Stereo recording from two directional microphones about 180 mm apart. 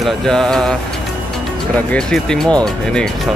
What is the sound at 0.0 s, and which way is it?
Speech, 5° left (ahead or behind).